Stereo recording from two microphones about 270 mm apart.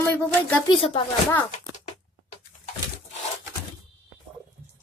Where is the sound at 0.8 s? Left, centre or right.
Left.